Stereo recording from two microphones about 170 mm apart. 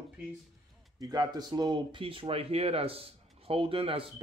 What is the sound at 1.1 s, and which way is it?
Speech, 25° right (ahead or behind).